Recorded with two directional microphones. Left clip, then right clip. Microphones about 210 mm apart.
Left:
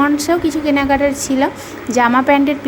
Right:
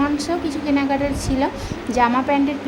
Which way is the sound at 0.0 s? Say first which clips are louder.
Left 7 dB; 25° left (ahead or behind).